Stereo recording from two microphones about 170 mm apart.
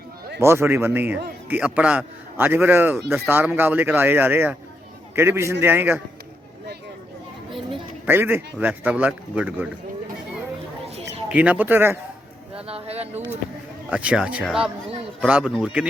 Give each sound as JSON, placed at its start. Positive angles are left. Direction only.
{"t": 0.3, "sound": "speech", "side_deg": -15}
{"t": 8.0, "sound": "speech", "side_deg": -10}
{"t": 11.3, "sound": "speech", "side_deg": -10}
{"t": 12.6, "sound": "a sound", "side_deg": -35}
{"t": 13.9, "sound": "speech", "side_deg": -5}